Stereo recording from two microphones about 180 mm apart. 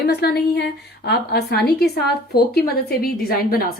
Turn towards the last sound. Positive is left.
turn(degrees=55)  # may be behind; listen again after turning